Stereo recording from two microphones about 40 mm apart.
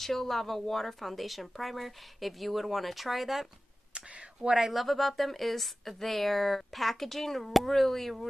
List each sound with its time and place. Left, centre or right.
0.0 s a woman's voice: centre
3.9 s a sound: right
4.6 s a woman's voice: centre